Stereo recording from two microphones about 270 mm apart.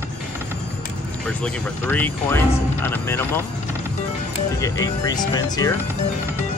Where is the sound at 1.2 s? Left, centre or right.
Centre.